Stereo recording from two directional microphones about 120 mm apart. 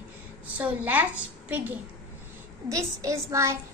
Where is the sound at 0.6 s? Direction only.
15° right (ahead or behind).